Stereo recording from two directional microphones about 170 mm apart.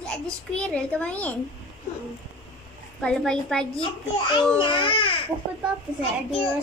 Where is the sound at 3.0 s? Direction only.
5° left (ahead or behind).